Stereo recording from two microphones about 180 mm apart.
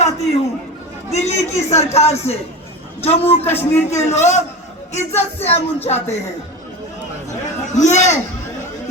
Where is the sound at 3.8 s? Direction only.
40° left (ahead or behind).